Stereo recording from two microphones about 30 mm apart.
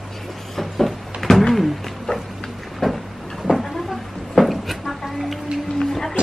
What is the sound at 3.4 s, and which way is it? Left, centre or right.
Vehicle, centre.